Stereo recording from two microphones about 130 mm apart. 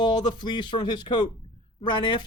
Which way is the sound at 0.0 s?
35° left (ahead or behind).